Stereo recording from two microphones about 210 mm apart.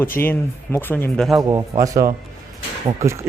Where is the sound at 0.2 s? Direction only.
10° left (ahead or behind).